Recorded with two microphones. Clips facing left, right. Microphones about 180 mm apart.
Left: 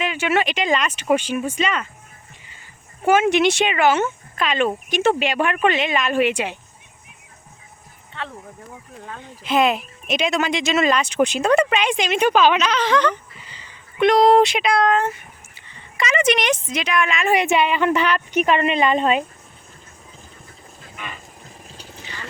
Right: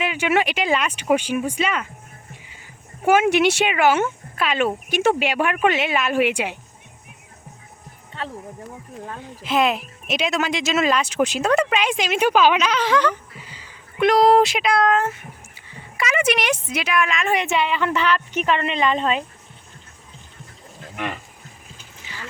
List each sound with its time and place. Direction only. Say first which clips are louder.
0.0 s speech: even; 10° right (ahead or behind)
3.0 s speech: even; 10° right (ahead or behind)
9.1 s a woman's voice: left 2 dB; centre (ahead or behind)
20.9 s speech: right 7 dB; 70° right (ahead or behind)
22.0 s a sound: even; 5° right (ahead or behind)